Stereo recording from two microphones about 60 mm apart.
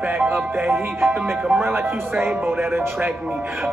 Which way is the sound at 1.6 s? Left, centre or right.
Right.